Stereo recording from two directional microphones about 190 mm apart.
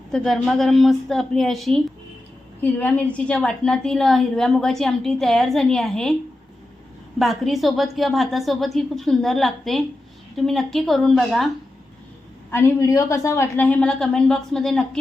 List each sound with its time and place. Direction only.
0.1 s a woman's voice: centre (ahead or behind)
7.2 s a woman's voice: centre (ahead or behind)
12.5 s a woman's voice: 10° left (ahead or behind)